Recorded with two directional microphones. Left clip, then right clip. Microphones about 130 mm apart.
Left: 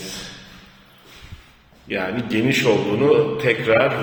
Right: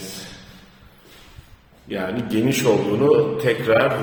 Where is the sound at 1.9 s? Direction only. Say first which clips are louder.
Left 2 dB; 10° right (ahead or behind).